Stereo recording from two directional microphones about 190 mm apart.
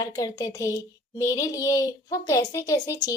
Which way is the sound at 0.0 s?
20° left (ahead or behind).